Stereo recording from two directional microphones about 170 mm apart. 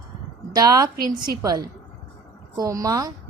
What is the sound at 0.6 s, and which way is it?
A woman's voice, 20° right (ahead or behind).